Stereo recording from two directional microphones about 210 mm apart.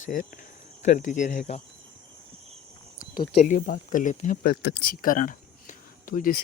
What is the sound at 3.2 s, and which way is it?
Speech, 35° left (ahead or behind).